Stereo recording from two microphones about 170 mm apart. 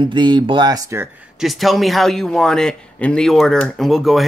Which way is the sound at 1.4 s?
Centre (ahead or behind).